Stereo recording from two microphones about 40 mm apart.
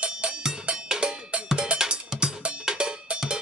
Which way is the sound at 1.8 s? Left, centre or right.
Centre.